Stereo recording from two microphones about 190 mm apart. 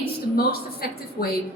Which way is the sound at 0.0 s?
55° left (ahead or behind).